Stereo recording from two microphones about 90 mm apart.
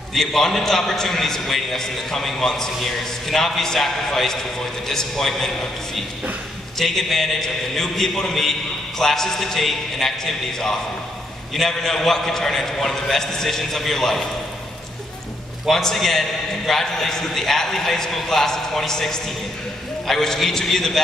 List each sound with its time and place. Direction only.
0.1 s a man's voice: 5° left (ahead or behind)
6.8 s a man's voice: 5° left (ahead or behind)
15.6 s a man's voice: 5° left (ahead or behind)